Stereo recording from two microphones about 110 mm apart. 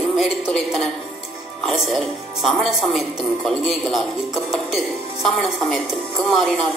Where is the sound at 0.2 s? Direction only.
Centre (ahead or behind).